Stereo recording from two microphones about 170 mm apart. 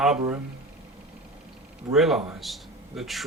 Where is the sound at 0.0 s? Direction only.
Centre (ahead or behind).